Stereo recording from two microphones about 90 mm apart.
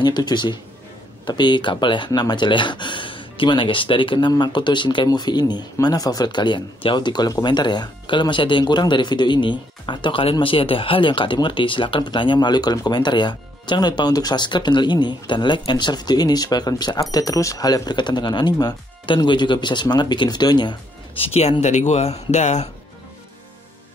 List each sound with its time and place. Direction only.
0.0 s speech: 55° left (ahead or behind); by 4.3 s 70° left (ahead or behind)
4.3 s speech: 55° left (ahead or behind)
10.4 s speech: 85° left; by 20.7 s 55° left (ahead or behind)
21.2 s speech: 90° left